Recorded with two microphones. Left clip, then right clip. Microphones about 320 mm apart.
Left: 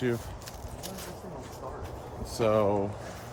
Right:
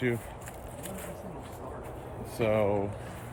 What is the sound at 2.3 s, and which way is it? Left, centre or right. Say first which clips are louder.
Speech: left 2 dB; left.